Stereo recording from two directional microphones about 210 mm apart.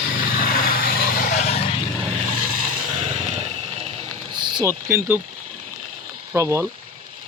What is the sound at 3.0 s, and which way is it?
Vehicle, 30° right (ahead or behind).